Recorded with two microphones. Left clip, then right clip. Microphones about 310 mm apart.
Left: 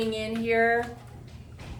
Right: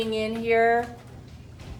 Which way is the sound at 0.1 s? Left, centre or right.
Centre.